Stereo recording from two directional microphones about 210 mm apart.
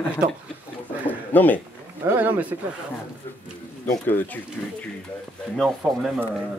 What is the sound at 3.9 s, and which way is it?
Speech, 10° left (ahead or behind).